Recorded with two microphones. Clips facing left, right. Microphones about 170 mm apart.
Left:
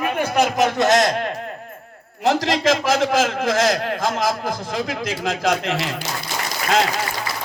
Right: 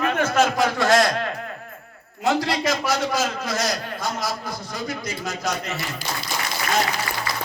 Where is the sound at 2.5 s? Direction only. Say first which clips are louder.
Left 5 dB; 90° left.